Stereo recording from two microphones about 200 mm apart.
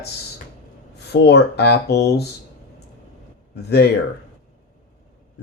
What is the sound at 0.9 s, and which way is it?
Speech, 55° left (ahead or behind).